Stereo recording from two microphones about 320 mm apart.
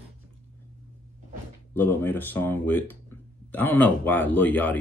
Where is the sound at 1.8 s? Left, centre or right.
Centre.